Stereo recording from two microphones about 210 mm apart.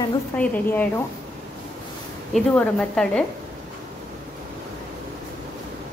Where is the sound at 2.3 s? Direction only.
5° left (ahead or behind).